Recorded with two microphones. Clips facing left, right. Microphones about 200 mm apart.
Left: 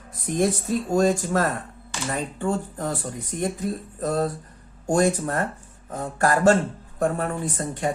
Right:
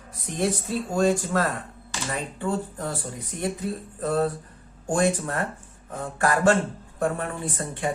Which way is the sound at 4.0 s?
40° left (ahead or behind).